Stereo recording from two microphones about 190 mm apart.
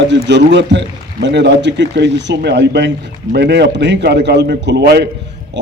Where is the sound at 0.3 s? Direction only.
65° right (ahead or behind).